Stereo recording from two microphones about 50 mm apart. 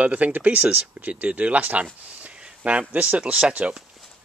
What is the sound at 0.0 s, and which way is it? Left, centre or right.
Speech, right.